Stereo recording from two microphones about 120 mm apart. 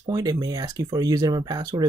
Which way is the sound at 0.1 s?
30° right (ahead or behind).